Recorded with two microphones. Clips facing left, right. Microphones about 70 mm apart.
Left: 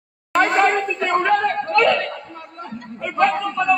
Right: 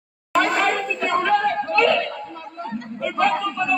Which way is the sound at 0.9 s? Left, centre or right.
Left.